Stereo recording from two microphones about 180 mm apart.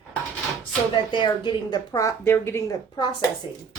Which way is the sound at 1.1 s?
25° left (ahead or behind).